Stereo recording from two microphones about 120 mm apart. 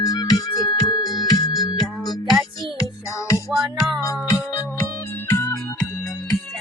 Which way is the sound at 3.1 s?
25° left (ahead or behind).